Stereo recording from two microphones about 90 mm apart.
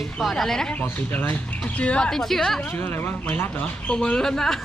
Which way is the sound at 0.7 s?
20° left (ahead or behind).